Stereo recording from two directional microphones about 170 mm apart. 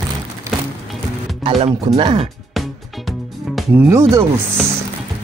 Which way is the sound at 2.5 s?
Centre (ahead or behind).